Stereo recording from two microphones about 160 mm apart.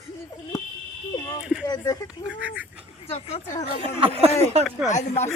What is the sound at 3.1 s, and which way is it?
Speech, 40° left (ahead or behind).